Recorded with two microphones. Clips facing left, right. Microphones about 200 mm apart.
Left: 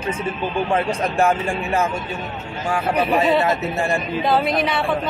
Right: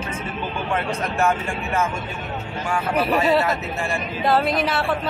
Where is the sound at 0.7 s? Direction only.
35° left (ahead or behind).